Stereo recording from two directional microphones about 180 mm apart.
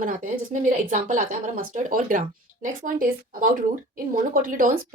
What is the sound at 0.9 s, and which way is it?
Speech, 45° right (ahead or behind).